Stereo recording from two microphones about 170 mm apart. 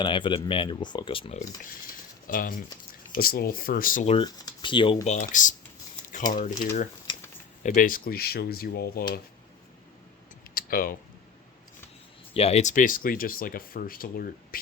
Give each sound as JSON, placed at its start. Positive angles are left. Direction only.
{"t": 0.0, "sound": "speech", "side_deg": 30}
{"t": 2.2, "sound": "speech", "side_deg": 55}
{"t": 4.0, "sound": "speech", "side_deg": 35}
{"t": 5.0, "sound": "speech", "side_deg": 50}
{"t": 7.6, "sound": "speech", "side_deg": 55}
{"t": 10.5, "sound": "typing", "side_deg": 60}
{"t": 12.3, "sound": "speech", "side_deg": 35}